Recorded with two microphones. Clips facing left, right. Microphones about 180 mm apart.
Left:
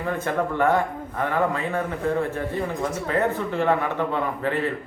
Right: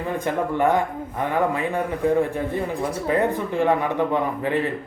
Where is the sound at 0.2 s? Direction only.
15° right (ahead or behind).